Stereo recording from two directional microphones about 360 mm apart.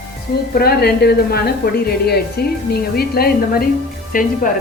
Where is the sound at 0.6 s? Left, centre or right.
Left.